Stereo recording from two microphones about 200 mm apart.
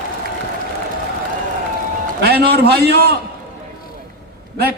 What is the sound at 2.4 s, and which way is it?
Speech, 50° right (ahead or behind).